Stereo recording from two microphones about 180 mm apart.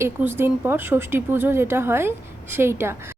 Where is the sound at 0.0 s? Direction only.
10° right (ahead or behind).